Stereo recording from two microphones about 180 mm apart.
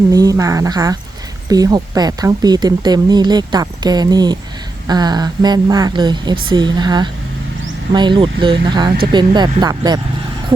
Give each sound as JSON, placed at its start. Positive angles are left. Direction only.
{"t": 0.1, "sound": "speech", "side_deg": -20}